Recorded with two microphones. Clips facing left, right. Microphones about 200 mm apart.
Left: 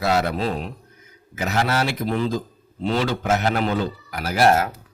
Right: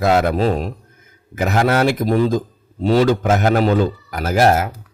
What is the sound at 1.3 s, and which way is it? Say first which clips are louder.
Speech: right 6 dB; 50° right (ahead or behind).